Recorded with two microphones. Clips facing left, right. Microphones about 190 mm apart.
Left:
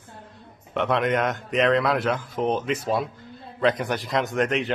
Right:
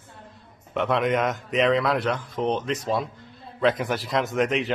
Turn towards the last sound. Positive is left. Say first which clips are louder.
# even
turn(degrees=0)  # may be behind; listen again after turning